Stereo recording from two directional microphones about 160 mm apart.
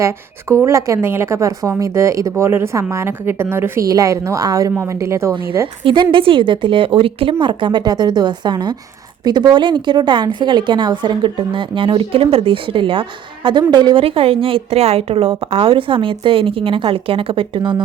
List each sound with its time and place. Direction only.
0.6 s a woman's voice: 20° right (ahead or behind)
5.8 s speech: 30° right (ahead or behind)